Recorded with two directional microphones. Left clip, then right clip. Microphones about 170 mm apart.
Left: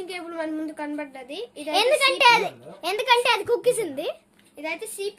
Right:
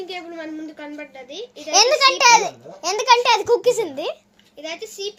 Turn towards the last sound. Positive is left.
turn(degrees=30)  # may be behind; listen again after turning